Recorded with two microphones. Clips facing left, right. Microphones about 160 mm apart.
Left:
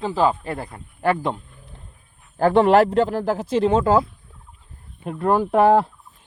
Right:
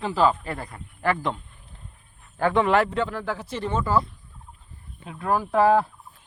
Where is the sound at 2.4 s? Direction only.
35° left (ahead or behind).